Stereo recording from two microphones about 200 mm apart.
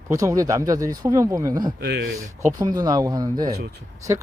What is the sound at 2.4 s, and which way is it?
Speech, 20° right (ahead or behind).